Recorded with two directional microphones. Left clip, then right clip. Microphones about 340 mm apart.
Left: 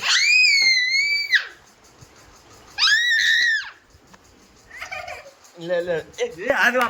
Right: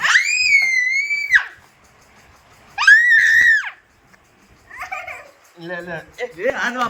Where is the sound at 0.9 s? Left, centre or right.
Centre.